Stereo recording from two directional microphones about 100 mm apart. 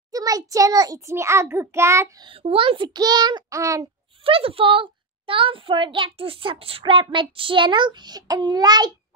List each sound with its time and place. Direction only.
0.1 s a child's voice: 35° right (ahead or behind)
2.4 s a child's voice: 65° right (ahead or behind)
2.9 s a child's voice: 40° right (ahead or behind)
3.4 s speech: 30° right (ahead or behind)
4.2 s a child's voice: 70° right (ahead or behind); by 8.9 s 45° right (ahead or behind)